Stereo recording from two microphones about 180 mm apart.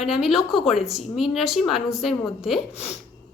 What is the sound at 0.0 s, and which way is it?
A woman's voice, centre (ahead or behind).